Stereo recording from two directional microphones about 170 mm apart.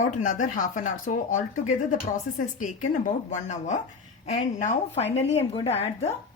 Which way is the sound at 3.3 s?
45° left (ahead or behind).